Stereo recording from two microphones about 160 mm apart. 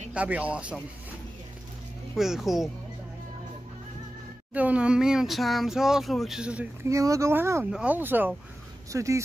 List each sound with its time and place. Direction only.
0.1 s speech: 10° right (ahead or behind)
2.1 s speech: centre (ahead or behind)
4.6 s speech: 10° right (ahead or behind)